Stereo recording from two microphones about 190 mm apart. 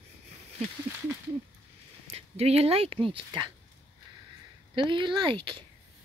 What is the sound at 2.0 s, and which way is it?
Speech, 30° right (ahead or behind).